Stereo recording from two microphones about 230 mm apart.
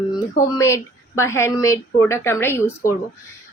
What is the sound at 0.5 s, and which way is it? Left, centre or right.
Speech, centre.